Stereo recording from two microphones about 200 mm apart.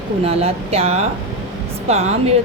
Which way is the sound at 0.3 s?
30° right (ahead or behind).